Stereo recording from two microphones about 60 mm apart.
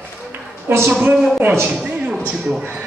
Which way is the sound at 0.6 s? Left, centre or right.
Right.